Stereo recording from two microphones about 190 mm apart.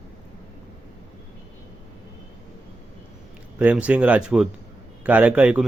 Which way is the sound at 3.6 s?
5° right (ahead or behind).